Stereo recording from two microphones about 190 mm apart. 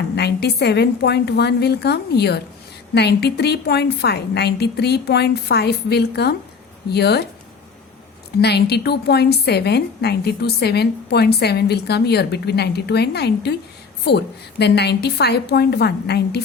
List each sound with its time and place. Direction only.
0.2 s a woman's voice: 60° left (ahead or behind)
8.4 s a woman's voice: 60° left (ahead or behind)